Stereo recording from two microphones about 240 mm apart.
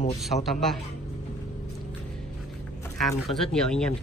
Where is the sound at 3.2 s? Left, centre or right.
Centre.